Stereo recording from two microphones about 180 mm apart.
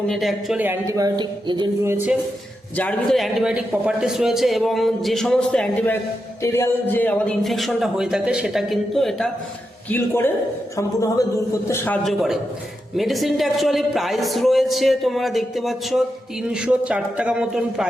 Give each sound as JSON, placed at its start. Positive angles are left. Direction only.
{"t": 0.1, "sound": "speech", "side_deg": 0}
{"t": 2.7, "sound": "a man's voice", "side_deg": 5}
{"t": 9.9, "sound": "speech", "side_deg": 10}
{"t": 12.0, "sound": "a man's voice", "side_deg": 0}